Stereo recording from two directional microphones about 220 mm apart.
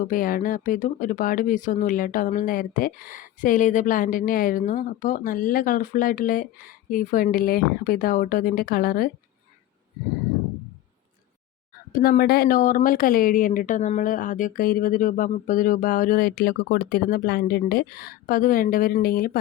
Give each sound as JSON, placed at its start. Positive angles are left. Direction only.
{"t": 0.1, "sound": "speech", "side_deg": 40}
{"t": 11.9, "sound": "speech", "side_deg": 40}